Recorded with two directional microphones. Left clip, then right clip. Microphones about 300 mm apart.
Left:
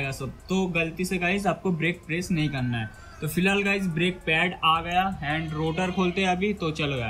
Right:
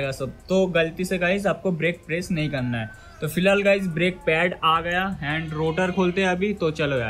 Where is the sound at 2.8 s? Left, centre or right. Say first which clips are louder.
Right 4 dB; centre.